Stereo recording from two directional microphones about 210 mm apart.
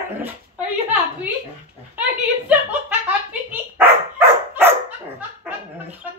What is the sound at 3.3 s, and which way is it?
Dog, 10° right (ahead or behind).